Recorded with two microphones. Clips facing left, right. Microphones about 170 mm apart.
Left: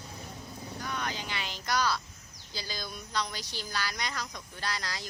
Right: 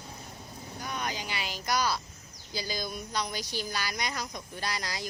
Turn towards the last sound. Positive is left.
turn(degrees=-15)  # may be behind; listen again after turning